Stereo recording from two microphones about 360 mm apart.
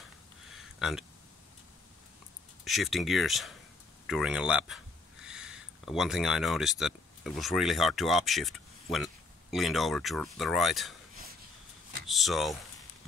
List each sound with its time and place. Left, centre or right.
0.6 s a sound: centre
2.6 s speech: centre
12.1 s speech: centre